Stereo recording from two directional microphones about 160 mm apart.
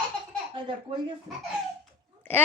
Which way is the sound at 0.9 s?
35° right (ahead or behind).